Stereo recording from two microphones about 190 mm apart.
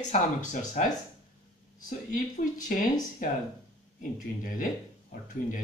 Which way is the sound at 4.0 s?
45° left (ahead or behind).